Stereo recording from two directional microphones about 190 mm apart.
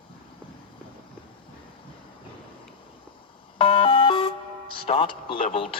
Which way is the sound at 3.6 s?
30° left (ahead or behind).